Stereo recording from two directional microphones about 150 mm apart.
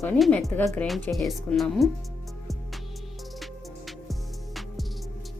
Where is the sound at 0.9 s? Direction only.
Centre (ahead or behind).